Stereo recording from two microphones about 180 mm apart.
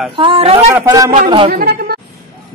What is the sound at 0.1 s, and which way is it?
Speech, 30° right (ahead or behind).